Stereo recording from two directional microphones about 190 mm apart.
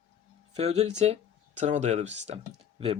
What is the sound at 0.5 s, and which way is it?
Speech, 35° right (ahead or behind).